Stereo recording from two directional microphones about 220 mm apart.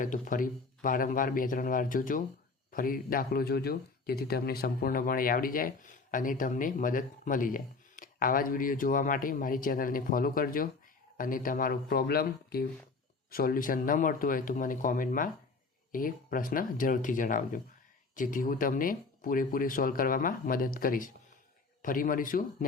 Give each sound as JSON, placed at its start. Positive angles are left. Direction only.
{"t": 0.0, "sound": "speech", "side_deg": 40}